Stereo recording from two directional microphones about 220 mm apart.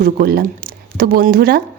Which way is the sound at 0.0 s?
45° right (ahead or behind).